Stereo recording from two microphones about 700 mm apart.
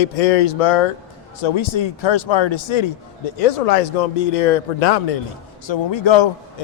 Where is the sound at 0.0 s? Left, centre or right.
Left.